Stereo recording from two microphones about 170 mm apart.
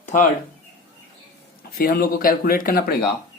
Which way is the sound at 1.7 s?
60° left (ahead or behind).